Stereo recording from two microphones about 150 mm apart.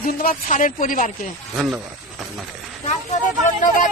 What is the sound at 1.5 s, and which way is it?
Speech, 10° right (ahead or behind).